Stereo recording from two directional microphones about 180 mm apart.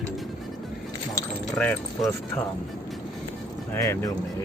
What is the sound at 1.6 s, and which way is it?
Speech, 5° left (ahead or behind).